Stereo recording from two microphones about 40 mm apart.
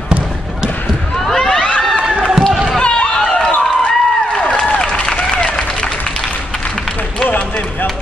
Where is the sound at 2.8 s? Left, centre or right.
Left.